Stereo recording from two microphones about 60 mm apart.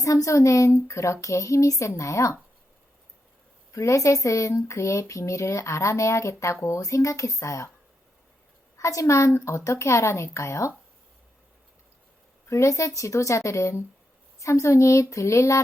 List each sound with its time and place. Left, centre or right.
0.0 s speech: left
3.7 s speech: left
8.8 s speech: left
12.5 s speech: left